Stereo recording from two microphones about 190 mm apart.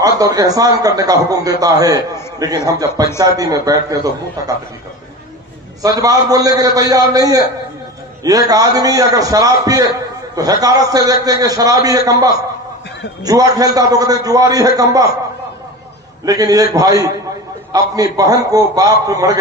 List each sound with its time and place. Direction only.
0.0 s a man's voice: 20° right (ahead or behind)
5.8 s a man's voice: 20° right (ahead or behind)
16.3 s a man's voice: 20° right (ahead or behind)